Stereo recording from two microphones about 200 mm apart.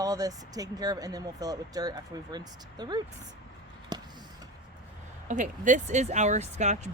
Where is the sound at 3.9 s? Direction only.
20° right (ahead or behind).